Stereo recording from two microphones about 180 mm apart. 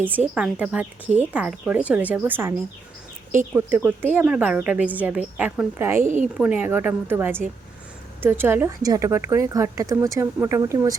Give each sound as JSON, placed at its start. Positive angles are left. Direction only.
{"t": 0.3, "sound": "a woman's voice", "side_deg": -5}
{"t": 6.0, "sound": "a woman's voice", "side_deg": -45}
{"t": 6.3, "sound": "a woman's voice", "side_deg": -10}